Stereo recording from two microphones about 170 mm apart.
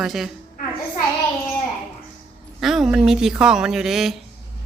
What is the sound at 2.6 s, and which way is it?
A man's voice, centre (ahead or behind).